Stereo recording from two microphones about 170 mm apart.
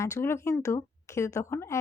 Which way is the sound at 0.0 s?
15° left (ahead or behind).